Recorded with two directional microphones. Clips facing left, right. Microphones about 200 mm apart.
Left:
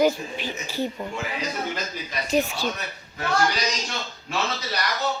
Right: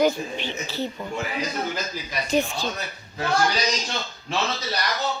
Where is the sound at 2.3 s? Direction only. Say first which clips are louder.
Even; 5° left (ahead or behind).